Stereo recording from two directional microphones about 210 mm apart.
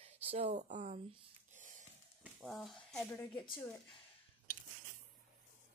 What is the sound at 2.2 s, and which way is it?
Speech, centre (ahead or behind).